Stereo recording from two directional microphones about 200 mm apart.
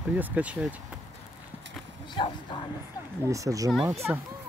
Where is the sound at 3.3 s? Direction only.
15° right (ahead or behind).